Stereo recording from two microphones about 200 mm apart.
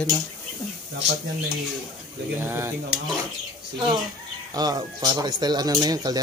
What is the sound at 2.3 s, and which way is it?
Speech, 10° right (ahead or behind).